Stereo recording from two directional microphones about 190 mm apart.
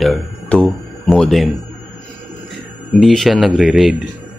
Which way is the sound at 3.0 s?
Centre (ahead or behind).